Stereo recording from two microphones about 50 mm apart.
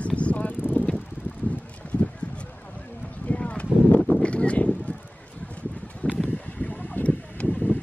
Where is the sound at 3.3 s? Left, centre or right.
Left.